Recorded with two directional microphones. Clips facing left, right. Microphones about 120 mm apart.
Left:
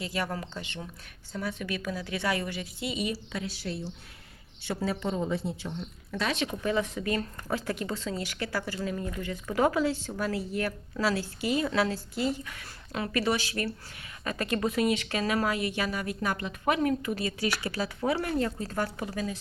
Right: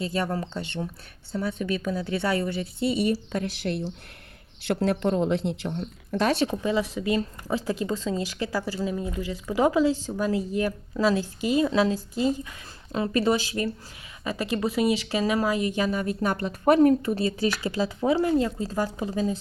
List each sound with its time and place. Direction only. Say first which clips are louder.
0.0 s speech: right 5 dB; 30° right (ahead or behind)
3.7 s speech: right 6 dB; 60° right (ahead or behind)
6.1 s speech: right 7 dB; 40° right (ahead or behind)
6.6 s speech: right 3 dB; 15° right (ahead or behind)
17.5 s speech: right 5 dB; 15° right (ahead or behind)